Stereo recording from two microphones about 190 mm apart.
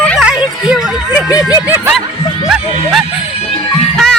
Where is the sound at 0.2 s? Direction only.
5° right (ahead or behind).